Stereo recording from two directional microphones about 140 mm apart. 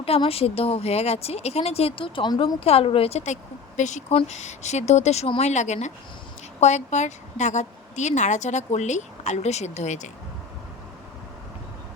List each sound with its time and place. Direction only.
0.0 s speech: 45° left (ahead or behind)
2.6 s a woman's voice: 45° left (ahead or behind)